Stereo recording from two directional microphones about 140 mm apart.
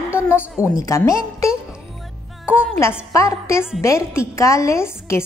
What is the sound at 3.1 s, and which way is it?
A woman's voice, 20° left (ahead or behind).